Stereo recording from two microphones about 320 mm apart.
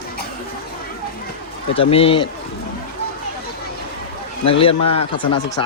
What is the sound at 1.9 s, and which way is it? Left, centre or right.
Speech, centre.